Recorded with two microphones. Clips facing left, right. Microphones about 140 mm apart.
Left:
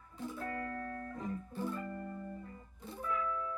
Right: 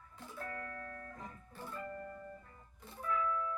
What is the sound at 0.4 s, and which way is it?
Music, 30° left (ahead or behind).